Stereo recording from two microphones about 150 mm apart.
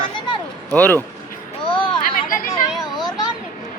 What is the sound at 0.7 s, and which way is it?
Speech, 10° left (ahead or behind).